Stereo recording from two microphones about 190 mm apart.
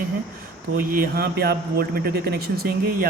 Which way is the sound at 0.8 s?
50° right (ahead or behind).